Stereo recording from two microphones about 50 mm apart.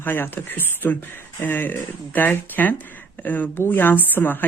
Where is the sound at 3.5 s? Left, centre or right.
Left.